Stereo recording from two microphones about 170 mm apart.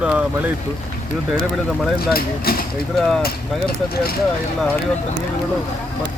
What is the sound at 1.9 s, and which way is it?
Speech, 65° left (ahead or behind).